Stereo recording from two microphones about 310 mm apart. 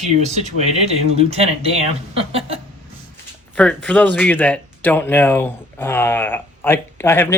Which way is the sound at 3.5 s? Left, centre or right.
Centre.